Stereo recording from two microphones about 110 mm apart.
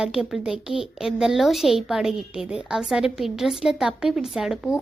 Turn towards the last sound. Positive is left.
turn(degrees=-5)  # may be behind; listen again after turning